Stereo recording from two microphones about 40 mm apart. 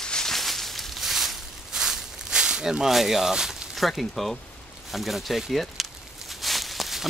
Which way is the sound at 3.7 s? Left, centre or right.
Centre.